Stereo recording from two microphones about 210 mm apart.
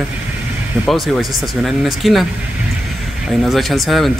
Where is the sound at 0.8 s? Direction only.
Centre (ahead or behind).